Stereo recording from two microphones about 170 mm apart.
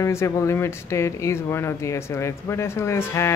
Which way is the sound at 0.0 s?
15° left (ahead or behind).